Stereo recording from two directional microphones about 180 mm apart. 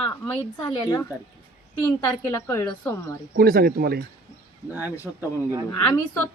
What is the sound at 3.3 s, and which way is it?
Speech, 60° right (ahead or behind).